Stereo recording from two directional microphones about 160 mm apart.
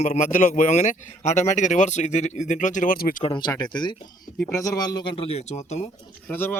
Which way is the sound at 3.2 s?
30° left (ahead or behind).